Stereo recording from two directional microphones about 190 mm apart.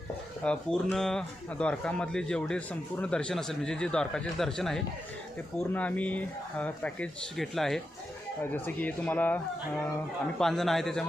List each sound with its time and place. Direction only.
0.4 s a man's voice: 5° left (ahead or behind)